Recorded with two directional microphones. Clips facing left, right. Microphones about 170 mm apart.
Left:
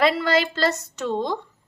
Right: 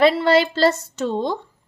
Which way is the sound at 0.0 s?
30° right (ahead or behind).